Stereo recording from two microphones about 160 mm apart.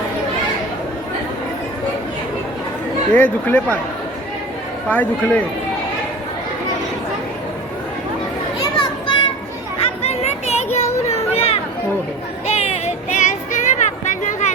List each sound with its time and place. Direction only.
3.1 s speech: 10° left (ahead or behind)
4.9 s speech: 10° left (ahead or behind)
8.8 s children playing: 30° left (ahead or behind)
9.8 s a sound: 40° left (ahead or behind)
12.5 s child singing: 45° left (ahead or behind)